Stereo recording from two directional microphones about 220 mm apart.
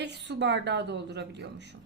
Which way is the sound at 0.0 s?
50° right (ahead or behind).